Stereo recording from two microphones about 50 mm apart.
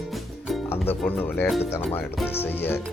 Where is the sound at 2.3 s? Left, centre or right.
Left.